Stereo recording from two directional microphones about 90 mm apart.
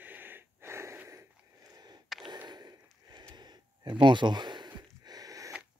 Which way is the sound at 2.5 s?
50° right (ahead or behind).